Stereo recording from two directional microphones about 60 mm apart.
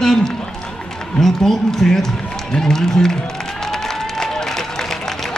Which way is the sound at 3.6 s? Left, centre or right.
Centre.